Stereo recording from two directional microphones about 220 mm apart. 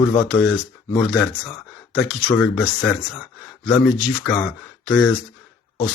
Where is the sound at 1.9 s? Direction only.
5° left (ahead or behind).